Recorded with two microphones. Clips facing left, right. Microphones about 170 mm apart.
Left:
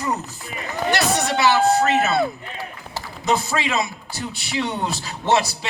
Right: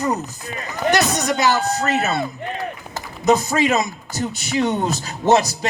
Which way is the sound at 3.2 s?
40° right (ahead or behind).